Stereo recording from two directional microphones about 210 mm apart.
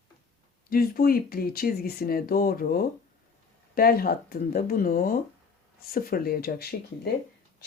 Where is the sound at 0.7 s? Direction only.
45° left (ahead or behind).